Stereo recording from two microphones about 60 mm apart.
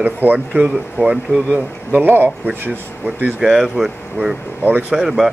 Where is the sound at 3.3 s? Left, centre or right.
Centre.